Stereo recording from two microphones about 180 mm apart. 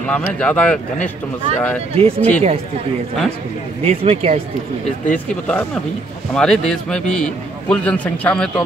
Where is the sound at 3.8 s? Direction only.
35° right (ahead or behind).